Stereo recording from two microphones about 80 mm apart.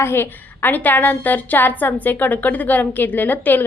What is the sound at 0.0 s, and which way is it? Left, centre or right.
A woman's voice, left.